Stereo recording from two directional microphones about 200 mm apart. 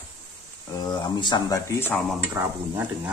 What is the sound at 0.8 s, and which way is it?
Speech, 20° left (ahead or behind).